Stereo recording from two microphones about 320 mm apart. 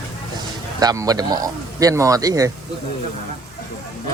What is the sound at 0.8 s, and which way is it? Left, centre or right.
A man's voice, centre.